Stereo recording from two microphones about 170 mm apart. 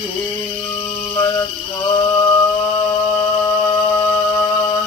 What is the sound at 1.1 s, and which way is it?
Mantra, 25° left (ahead or behind).